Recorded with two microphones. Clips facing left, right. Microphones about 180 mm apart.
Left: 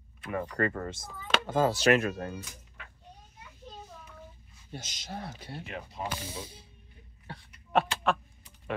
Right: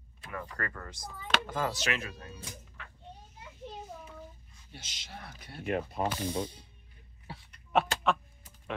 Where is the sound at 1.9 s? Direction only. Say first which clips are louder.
Left 11 dB; 55° left (ahead or behind).